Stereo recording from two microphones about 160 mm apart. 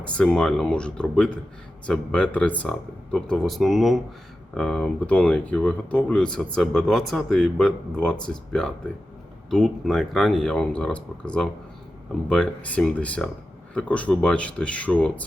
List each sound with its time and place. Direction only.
0.0 s speech: 5° left (ahead or behind)